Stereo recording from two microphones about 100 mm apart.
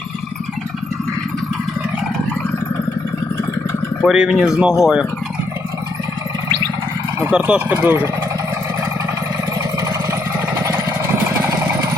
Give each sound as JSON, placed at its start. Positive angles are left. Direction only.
{"t": 4.0, "sound": "speech", "side_deg": -5}
{"t": 7.3, "sound": "speech", "side_deg": -10}
{"t": 10.6, "sound": "vehicle", "side_deg": -25}